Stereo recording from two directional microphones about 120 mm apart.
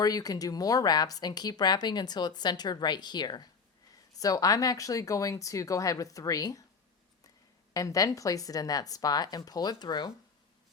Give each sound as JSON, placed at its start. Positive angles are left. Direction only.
{"t": 0.0, "sound": "speech", "side_deg": 30}
{"t": 7.7, "sound": "speech", "side_deg": 30}